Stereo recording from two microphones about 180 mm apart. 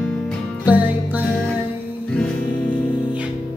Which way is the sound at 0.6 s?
10° right (ahead or behind).